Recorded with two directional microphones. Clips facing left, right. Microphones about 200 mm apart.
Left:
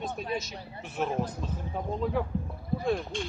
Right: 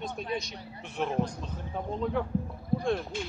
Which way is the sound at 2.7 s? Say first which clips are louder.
Even; 5° left (ahead or behind).